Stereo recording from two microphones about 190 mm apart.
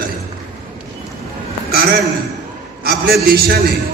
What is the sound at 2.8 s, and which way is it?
Speech, 55° right (ahead or behind).